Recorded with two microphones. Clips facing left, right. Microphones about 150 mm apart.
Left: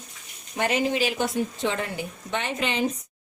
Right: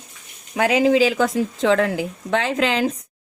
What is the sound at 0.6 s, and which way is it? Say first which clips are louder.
A woman's voice: right 8 dB; 90° right.